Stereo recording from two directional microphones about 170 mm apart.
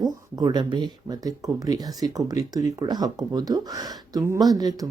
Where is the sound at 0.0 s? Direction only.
25° right (ahead or behind).